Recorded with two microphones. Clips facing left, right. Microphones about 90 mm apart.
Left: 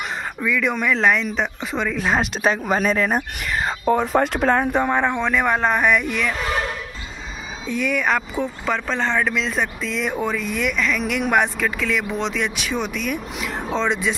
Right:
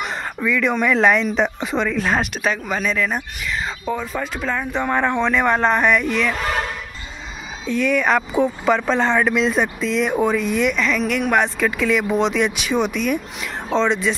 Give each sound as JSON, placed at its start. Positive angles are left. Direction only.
{"t": 0.4, "sound": "speech", "side_deg": 5}
{"t": 2.3, "sound": "speech", "side_deg": 35}
{"t": 4.8, "sound": "speech", "side_deg": 15}
{"t": 7.6, "sound": "speech", "side_deg": 10}
{"t": 11.6, "sound": "speech", "side_deg": -5}